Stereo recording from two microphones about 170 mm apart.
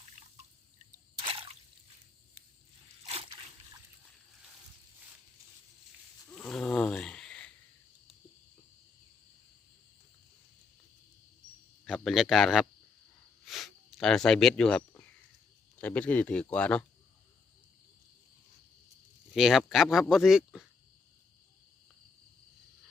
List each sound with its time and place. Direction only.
0.0 s drip: 40° right (ahead or behind)
3.0 s a sound: 35° right (ahead or behind)
6.2 s roaring cats: 5° left (ahead or behind)
11.9 s speech: centre (ahead or behind)
19.3 s speech: 5° right (ahead or behind)